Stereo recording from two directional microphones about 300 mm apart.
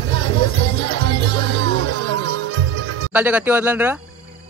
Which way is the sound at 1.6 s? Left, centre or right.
Right.